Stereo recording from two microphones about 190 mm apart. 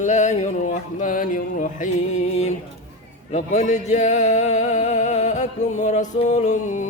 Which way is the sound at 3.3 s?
40° left (ahead or behind).